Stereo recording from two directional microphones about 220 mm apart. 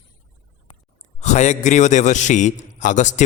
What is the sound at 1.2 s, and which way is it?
A man's voice, 30° left (ahead or behind).